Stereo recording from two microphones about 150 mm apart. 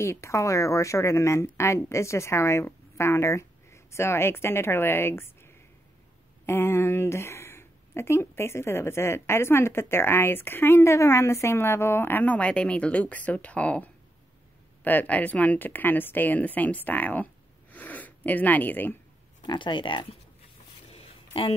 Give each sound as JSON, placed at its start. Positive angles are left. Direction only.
{"t": 0.0, "sound": "a woman's voice", "side_deg": 20}
{"t": 19.4, "sound": "speech", "side_deg": 30}
{"t": 20.9, "sound": "a sound", "side_deg": 40}